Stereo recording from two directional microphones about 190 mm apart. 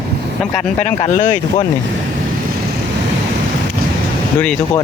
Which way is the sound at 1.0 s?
40° left (ahead or behind).